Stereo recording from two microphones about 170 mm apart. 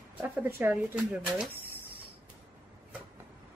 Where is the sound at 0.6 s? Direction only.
10° right (ahead or behind).